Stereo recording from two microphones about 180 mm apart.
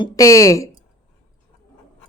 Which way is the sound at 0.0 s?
20° left (ahead or behind).